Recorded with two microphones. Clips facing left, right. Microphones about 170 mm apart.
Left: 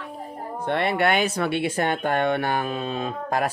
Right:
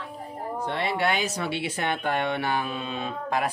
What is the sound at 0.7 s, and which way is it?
Speech, 60° left (ahead or behind).